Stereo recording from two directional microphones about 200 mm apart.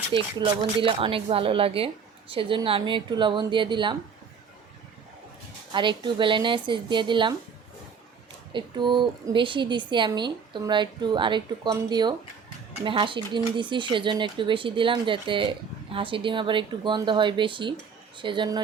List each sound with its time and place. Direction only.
0.1 s speech: 25° right (ahead or behind)
5.7 s speech: 25° right (ahead or behind)
8.5 s speech: 25° right (ahead or behind)